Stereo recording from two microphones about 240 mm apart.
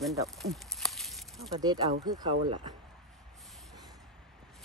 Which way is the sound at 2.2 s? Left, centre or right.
Right.